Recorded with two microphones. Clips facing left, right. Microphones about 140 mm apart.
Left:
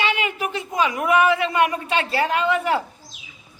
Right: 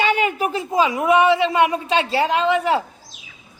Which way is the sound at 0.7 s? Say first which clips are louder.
Right 3 dB; 25° right (ahead or behind).